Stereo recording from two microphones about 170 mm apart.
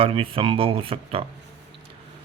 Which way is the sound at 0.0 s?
35° right (ahead or behind).